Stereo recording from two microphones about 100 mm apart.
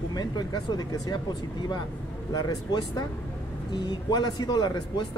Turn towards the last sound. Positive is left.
turn(degrees=45)  # may be behind; listen again after turning